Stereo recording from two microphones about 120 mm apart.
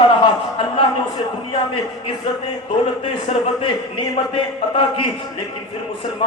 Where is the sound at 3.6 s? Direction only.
45° left (ahead or behind).